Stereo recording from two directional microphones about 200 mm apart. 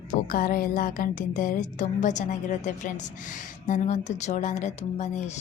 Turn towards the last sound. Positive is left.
turn(degrees=35)  # may be behind; listen again after turning